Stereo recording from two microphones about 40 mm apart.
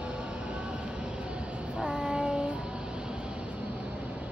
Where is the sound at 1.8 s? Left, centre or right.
Centre.